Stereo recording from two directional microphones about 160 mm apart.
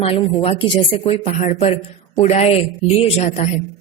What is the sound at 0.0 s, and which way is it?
A woman's voice, 40° left (ahead or behind).